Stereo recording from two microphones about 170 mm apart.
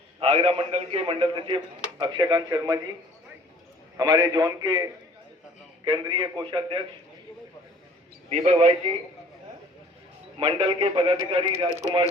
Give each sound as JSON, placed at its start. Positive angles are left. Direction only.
{"t": 0.2, "sound": "speech", "side_deg": -35}
{"t": 3.9, "sound": "speech", "side_deg": -25}
{"t": 8.3, "sound": "a man's voice", "side_deg": -40}
{"t": 10.4, "sound": "a man's voice", "side_deg": -30}